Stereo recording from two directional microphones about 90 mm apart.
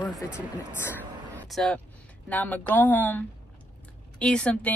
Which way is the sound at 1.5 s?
5° left (ahead or behind).